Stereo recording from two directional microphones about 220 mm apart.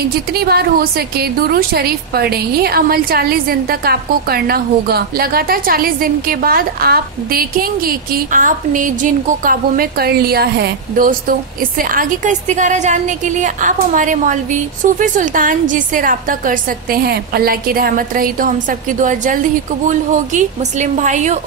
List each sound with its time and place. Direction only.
0.0 s a woman's voice: 45° right (ahead or behind)